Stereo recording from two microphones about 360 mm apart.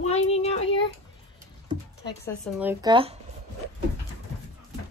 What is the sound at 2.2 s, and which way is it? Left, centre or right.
Speech, centre.